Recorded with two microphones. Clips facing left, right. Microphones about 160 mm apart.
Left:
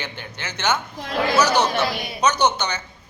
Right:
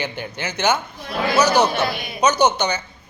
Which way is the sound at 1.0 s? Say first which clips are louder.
Left 2 dB; 90° left.